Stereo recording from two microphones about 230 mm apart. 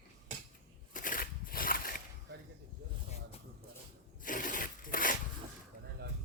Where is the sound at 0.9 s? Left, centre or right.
Left.